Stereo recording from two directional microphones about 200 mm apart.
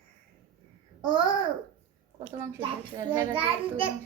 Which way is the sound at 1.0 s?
25° right (ahead or behind).